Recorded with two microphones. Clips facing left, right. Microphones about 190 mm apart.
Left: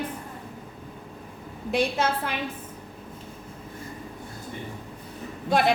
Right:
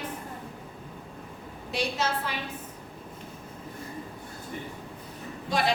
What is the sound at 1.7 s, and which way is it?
Speech, 55° left (ahead or behind).